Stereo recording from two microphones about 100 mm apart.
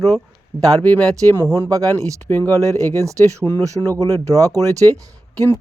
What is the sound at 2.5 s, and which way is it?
Speech, 35° right (ahead or behind).